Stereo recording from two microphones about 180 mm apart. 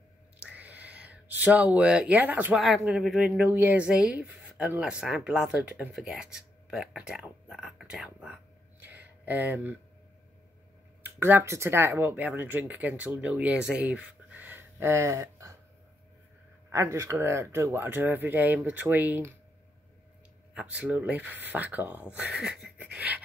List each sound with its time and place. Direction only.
0.4 s speech: 10° right (ahead or behind)
8.8 s a sound: 10° right (ahead or behind)
11.0 s speech: 10° right (ahead or behind)
16.7 s speech: 15° right (ahead or behind)
20.8 s speech: 10° right (ahead or behind)